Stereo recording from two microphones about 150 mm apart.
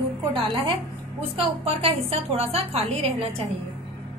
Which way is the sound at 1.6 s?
40° right (ahead or behind).